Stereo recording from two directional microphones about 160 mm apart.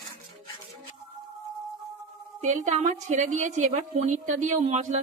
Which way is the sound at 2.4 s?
50° right (ahead or behind).